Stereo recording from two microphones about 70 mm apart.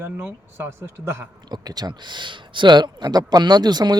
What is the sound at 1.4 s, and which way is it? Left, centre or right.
Speech, right.